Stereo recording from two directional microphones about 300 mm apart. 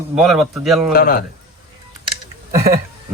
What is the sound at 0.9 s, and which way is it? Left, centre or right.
Speech, left.